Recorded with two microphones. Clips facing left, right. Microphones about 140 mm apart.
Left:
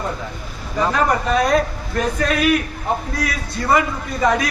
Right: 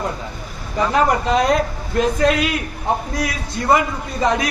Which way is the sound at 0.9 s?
20° right (ahead or behind).